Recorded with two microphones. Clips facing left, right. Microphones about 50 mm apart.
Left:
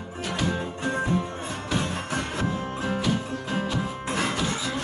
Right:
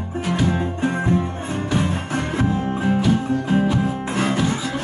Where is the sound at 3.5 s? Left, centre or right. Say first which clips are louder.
Right 7 dB; right.